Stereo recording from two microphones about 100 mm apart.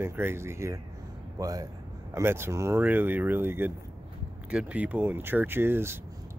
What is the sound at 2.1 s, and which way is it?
Speech, 25° right (ahead or behind).